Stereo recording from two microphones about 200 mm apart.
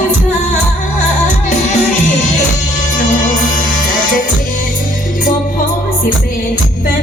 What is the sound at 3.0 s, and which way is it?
Music, 40° left (ahead or behind).